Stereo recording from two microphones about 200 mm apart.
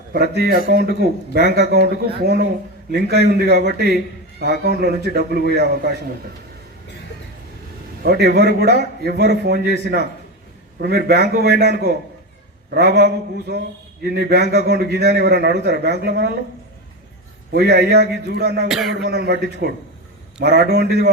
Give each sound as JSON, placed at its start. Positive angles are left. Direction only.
{"t": 0.1, "sound": "a man's voice", "side_deg": -55}
{"t": 8.0, "sound": "a man's voice", "side_deg": -55}
{"t": 17.5, "sound": "a man's voice", "side_deg": -55}
{"t": 18.7, "sound": "speech", "side_deg": 0}
{"t": 18.9, "sound": "a man's voice", "side_deg": -55}